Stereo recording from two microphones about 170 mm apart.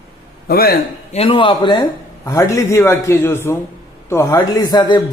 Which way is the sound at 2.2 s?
15° left (ahead or behind).